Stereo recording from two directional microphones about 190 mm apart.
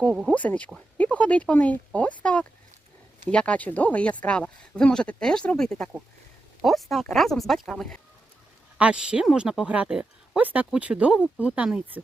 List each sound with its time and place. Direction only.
0.0 s speech: 5° left (ahead or behind)